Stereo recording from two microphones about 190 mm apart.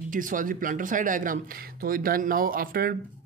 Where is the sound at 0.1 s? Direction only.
45° right (ahead or behind).